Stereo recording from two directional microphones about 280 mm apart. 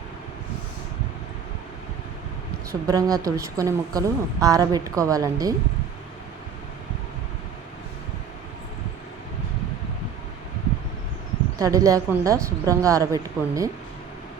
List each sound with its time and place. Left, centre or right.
2.8 s a woman's voice: centre
11.6 s a woman's voice: centre